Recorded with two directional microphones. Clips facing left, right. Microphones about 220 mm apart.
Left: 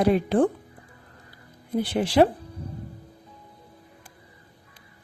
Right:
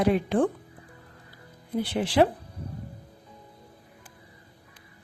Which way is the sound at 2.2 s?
45° left (ahead or behind).